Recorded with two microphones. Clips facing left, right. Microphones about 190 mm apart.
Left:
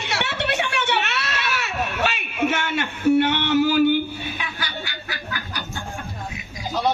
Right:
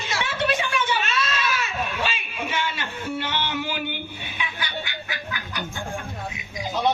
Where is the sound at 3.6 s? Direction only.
40° left (ahead or behind).